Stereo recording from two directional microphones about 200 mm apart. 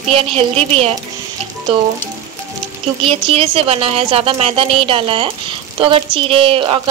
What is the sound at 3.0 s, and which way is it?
A woman's voice, 30° right (ahead or behind).